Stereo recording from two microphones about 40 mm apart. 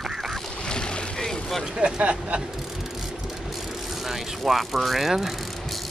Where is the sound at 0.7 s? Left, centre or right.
Left.